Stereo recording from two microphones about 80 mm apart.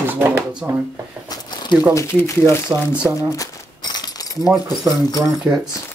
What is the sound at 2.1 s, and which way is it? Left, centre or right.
Speech, left.